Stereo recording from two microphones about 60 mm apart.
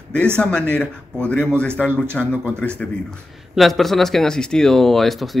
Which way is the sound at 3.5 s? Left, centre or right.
Centre.